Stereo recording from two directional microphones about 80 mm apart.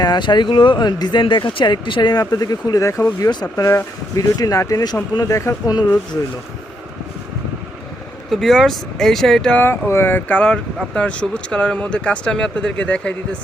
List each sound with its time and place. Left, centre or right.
0.0 s speech: left
5.6 s speech: left
8.3 s speech: centre
9.6 s speech: left; by 13.1 s centre